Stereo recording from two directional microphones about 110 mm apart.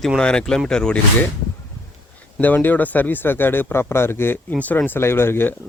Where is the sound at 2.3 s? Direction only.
15° left (ahead or behind).